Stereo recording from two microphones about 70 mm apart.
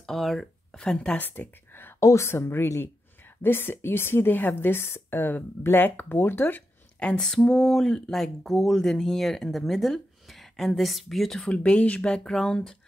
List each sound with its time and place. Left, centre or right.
0.0 s speech: centre
0.7 s speech: centre
1.1 s speech: left
2.0 s speech: left
7.0 s speech: centre